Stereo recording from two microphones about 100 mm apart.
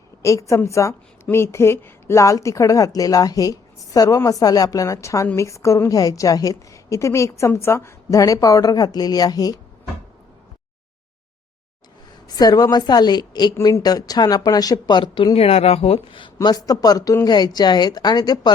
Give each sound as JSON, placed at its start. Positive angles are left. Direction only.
{"t": 0.2, "sound": "a woman's voice", "side_deg": 30}
{"t": 12.4, "sound": "a woman's voice", "side_deg": 40}